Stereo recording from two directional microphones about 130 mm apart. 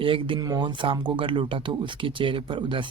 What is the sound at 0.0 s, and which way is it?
Speech, 45° right (ahead or behind).